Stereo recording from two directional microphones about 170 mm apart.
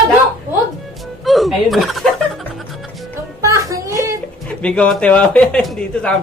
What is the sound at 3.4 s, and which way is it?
Child singing, 20° right (ahead or behind).